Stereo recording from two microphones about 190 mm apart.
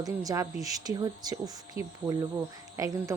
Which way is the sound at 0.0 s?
20° right (ahead or behind).